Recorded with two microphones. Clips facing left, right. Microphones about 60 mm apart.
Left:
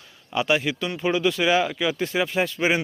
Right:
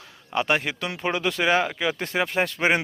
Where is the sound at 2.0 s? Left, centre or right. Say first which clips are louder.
Left 1 dB; right.